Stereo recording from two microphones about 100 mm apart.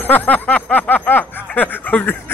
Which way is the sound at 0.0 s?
15° left (ahead or behind).